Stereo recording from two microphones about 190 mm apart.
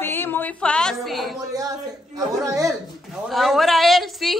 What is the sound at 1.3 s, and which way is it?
Speech, 20° right (ahead or behind).